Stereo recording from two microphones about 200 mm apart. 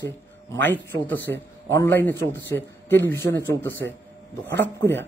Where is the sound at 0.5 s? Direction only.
10° left (ahead or behind).